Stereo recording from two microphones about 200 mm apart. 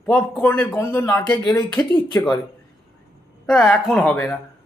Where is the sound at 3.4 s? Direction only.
5° left (ahead or behind).